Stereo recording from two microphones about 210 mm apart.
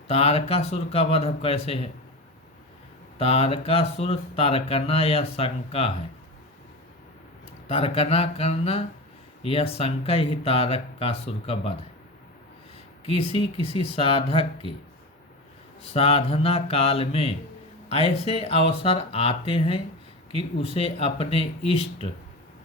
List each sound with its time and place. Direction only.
0.1 s speech: 30° left (ahead or behind)
3.2 s speech: 30° left (ahead or behind)
7.7 s speech: 25° left (ahead or behind)
13.1 s speech: 30° left (ahead or behind)
15.8 s speech: 30° left (ahead or behind)